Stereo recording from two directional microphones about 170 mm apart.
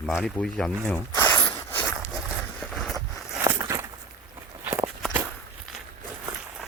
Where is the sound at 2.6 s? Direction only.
Centre (ahead or behind).